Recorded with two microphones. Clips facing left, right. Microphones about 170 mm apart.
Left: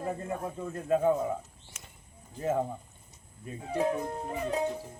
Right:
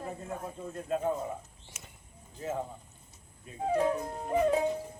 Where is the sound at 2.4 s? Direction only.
55° left (ahead or behind).